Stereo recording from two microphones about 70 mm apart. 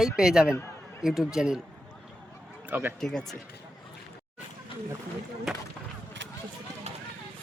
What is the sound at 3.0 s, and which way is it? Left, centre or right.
Speech, centre.